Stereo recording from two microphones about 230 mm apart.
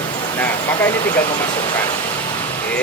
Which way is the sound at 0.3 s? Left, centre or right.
Centre.